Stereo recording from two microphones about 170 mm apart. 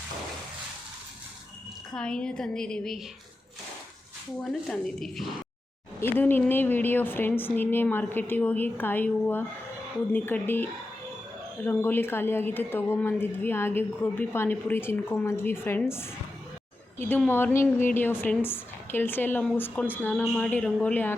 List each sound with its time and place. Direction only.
1.9 s a woman's voice: 5° left (ahead or behind)
4.4 s a woman's voice: centre (ahead or behind)
6.0 s a woman's voice: 10° left (ahead or behind)
17.2 s a woman's voice: 10° left (ahead or behind)